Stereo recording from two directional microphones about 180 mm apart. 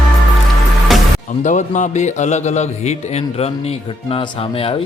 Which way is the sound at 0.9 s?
Centre (ahead or behind).